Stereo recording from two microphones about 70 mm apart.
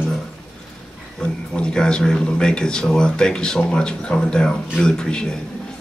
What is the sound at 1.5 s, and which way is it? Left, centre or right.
Speech, centre.